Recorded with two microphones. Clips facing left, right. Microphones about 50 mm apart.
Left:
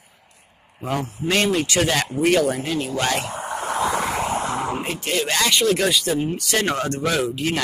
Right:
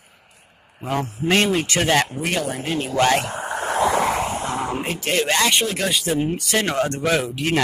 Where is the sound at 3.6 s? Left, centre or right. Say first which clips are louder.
Right 3 dB; right.